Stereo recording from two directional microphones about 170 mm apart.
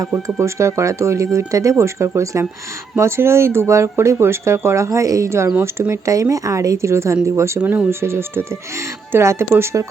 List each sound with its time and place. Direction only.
0.3 s speech: 15° right (ahead or behind)